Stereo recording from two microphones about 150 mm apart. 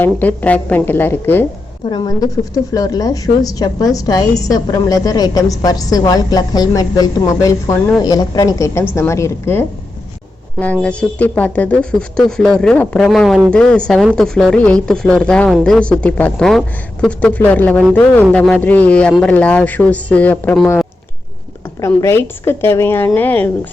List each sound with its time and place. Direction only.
0.0 s speech: 10° left (ahead or behind)
1.8 s a woman's voice: 30° left (ahead or behind); by 20.6 s 10° left (ahead or behind)
21.8 s speech: 20° left (ahead or behind)